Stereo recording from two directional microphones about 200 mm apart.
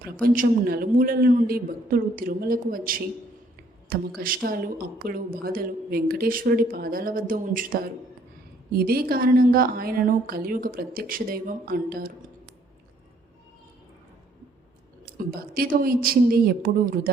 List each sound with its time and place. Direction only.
0.0 s a woman's voice: 45° right (ahead or behind)
4.2 s a woman's voice: 45° right (ahead or behind)
15.0 s a woman's voice: 50° right (ahead or behind)